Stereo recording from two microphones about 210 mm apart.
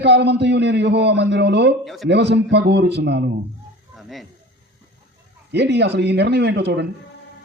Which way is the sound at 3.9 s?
Centre (ahead or behind).